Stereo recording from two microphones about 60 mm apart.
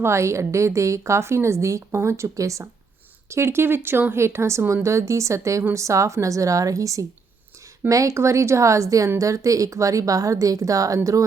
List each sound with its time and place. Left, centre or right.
0.0 s a woman's voice: right
3.2 s a woman's voice: right